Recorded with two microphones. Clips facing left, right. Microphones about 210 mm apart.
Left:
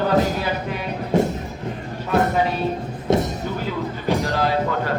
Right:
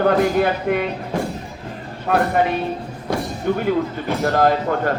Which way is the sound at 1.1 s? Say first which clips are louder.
Left 6 dB; 25° left (ahead or behind).